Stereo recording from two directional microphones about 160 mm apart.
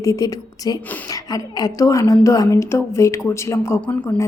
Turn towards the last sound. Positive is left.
turn(degrees=15)  # may be behind; listen again after turning